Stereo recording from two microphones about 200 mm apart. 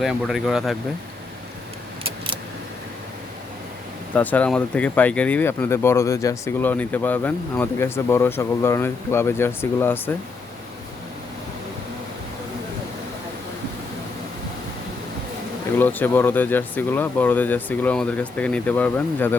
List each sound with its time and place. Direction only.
0.0 s speech: centre (ahead or behind)
2.0 s keys jangling: 25° right (ahead or behind)
4.1 s speech: 10° left (ahead or behind)
15.8 s speech: 10° left (ahead or behind)